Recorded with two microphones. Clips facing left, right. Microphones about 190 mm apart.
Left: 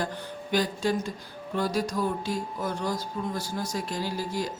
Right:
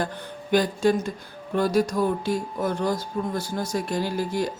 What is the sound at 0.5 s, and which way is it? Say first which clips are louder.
A woman's voice: right 6 dB; 55° right (ahead or behind).